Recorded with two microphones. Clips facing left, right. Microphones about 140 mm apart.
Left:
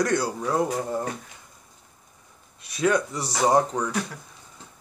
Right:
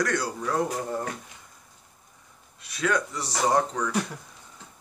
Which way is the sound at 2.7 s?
20° left (ahead or behind).